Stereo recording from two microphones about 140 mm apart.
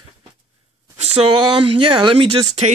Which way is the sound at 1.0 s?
45° right (ahead or behind).